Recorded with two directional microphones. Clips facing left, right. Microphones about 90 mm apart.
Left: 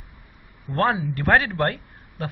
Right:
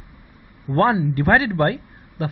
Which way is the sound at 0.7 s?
5° right (ahead or behind).